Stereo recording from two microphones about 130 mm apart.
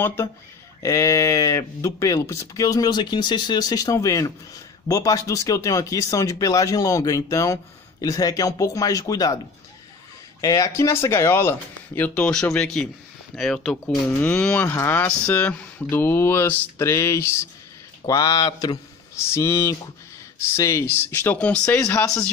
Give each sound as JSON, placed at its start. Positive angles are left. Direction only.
{"t": 0.0, "sound": "speech", "side_deg": 20}
{"t": 10.4, "sound": "speech", "side_deg": 25}
{"t": 12.1, "sound": "speech", "side_deg": 5}